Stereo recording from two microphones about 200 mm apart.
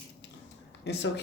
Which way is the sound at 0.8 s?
60° left (ahead or behind).